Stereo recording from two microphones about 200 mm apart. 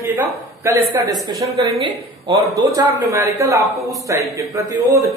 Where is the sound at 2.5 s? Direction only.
20° right (ahead or behind).